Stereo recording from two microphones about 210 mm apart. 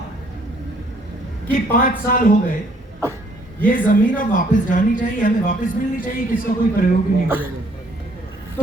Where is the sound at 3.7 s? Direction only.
40° left (ahead or behind).